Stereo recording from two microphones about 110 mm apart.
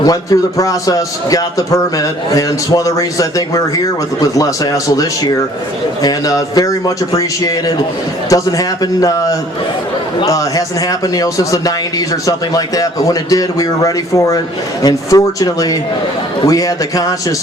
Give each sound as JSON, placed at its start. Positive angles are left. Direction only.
{"t": 0.0, "sound": "a man's voice", "side_deg": 35}